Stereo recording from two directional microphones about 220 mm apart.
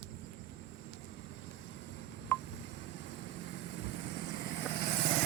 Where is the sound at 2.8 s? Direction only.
55° left (ahead or behind).